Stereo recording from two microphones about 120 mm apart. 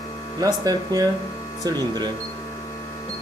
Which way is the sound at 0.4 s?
30° right (ahead or behind).